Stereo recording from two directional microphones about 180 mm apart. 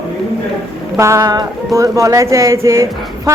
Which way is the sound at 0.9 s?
15° right (ahead or behind).